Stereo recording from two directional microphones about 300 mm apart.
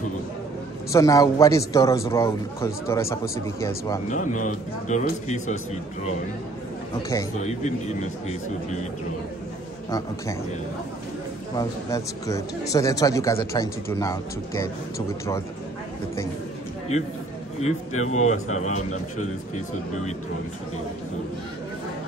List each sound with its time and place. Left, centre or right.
0.9 s speech: centre
4.1 s a man's voice: left
7.0 s speech: centre
7.3 s a man's voice: left
9.8 s speech: centre
11.5 s speech: centre
17.6 s a man's voice: left